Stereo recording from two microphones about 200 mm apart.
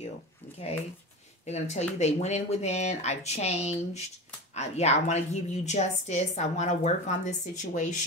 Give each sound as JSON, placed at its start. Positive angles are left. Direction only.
{"t": 1.4, "sound": "a woman's voice", "side_deg": 35}